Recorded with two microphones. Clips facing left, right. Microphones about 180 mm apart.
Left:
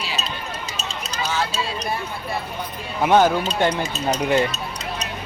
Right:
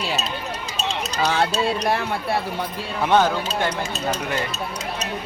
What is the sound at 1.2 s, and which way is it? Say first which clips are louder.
Speech: right 4 dB; 65° right (ahead or behind).